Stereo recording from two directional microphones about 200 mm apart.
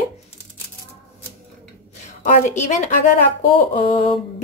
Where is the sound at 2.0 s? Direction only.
35° left (ahead or behind).